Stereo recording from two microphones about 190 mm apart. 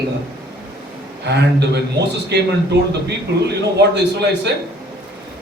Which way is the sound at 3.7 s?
60° right (ahead or behind).